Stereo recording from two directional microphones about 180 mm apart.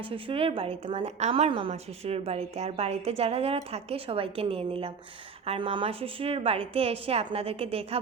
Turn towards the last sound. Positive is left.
turn(degrees=-35)  # may be behind; listen again after turning